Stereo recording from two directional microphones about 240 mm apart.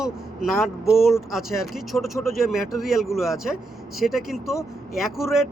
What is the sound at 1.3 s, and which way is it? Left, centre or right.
Speech, centre.